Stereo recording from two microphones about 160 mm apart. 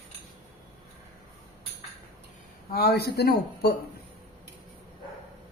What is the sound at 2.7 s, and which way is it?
A man's voice, 85° left.